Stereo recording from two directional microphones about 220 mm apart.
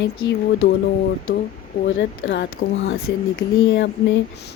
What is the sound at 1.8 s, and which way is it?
Speech, 55° left (ahead or behind).